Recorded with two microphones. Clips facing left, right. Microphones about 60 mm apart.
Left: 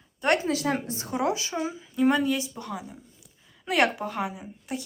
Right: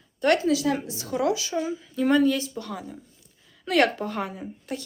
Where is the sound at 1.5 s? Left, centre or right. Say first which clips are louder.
Right 1 dB; centre.